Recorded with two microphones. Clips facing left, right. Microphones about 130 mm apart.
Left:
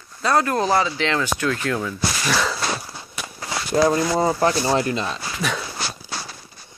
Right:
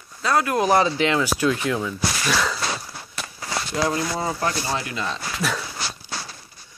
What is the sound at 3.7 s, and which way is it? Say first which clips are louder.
Speech: left 7 dB; 30° left (ahead or behind).